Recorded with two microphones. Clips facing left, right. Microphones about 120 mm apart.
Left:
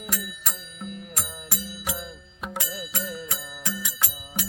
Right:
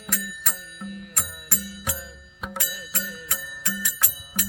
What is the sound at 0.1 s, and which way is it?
Music, 15° left (ahead or behind).